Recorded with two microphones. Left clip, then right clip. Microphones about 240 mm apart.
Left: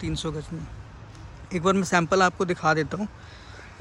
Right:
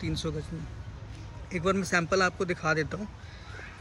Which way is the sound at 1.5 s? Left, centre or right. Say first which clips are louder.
Left 5 dB; centre.